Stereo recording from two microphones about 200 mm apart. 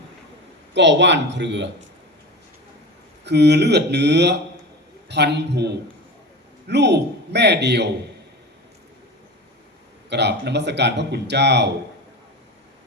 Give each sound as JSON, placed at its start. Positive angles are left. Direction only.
{"t": 0.7, "sound": "speech", "side_deg": -60}
{"t": 3.2, "sound": "speech", "side_deg": -55}
{"t": 10.1, "sound": "speech", "side_deg": -60}